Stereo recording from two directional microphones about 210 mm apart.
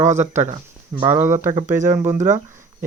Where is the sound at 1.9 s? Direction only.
10° right (ahead or behind).